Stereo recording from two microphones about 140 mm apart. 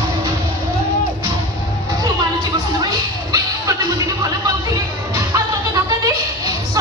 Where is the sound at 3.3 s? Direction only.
25° right (ahead or behind).